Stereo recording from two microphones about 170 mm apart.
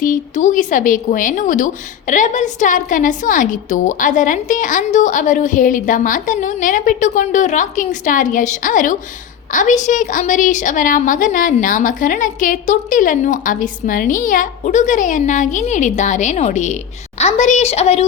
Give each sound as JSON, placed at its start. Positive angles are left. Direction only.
{"t": 0.0, "sound": "a woman's voice", "side_deg": 50}